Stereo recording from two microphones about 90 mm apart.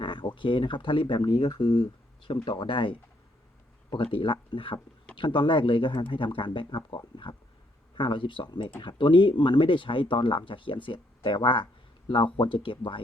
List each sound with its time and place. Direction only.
0.0 s speech: 65° left (ahead or behind)
1.4 s speech: 75° left (ahead or behind)